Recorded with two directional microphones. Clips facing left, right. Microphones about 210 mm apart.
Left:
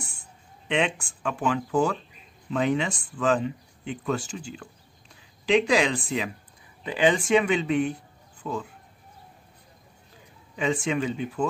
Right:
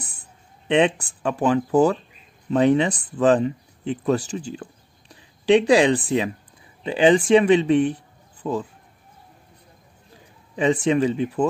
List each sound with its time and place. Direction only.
0.7 s speech: 35° right (ahead or behind)
10.5 s speech: 35° right (ahead or behind)